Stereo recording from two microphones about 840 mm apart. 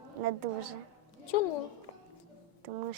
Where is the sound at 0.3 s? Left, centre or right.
Right.